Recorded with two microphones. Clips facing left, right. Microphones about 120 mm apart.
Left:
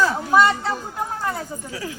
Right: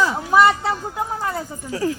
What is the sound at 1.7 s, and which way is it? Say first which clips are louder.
Speech: right 11 dB; 40° right (ahead or behind).